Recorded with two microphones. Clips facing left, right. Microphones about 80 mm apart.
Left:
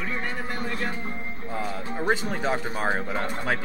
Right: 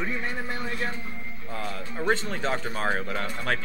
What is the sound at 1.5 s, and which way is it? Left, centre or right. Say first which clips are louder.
Speech: left 3 dB; centre.